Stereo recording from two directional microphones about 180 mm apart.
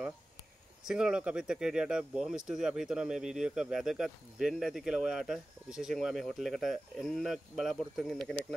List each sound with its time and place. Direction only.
0.8 s speech: 5° right (ahead or behind)